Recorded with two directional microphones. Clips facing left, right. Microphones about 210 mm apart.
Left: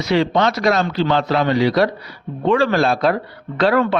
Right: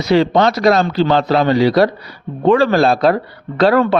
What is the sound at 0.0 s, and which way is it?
A man's voice, 35° right (ahead or behind).